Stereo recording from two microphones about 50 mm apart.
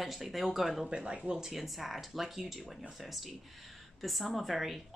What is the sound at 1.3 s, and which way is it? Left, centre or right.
Speech, centre.